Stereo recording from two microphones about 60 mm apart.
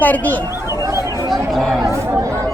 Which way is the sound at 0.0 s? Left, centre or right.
Left.